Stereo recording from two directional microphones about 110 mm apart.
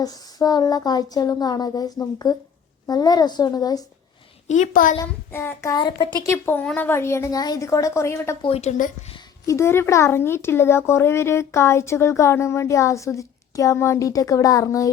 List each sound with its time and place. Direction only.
0.0 s speech: 35° left (ahead or behind)
4.5 s a woman's voice: 90° left
4.9 s speech: 25° left (ahead or behind)
5.7 s speech: 45° left (ahead or behind)
6.2 s speech: 20° left (ahead or behind)
8.4 s a woman's voice: 65° left (ahead or behind)
9.5 s speech: 25° left (ahead or behind)